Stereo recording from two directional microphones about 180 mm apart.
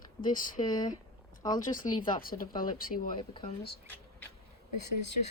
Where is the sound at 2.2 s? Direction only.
50° left (ahead or behind).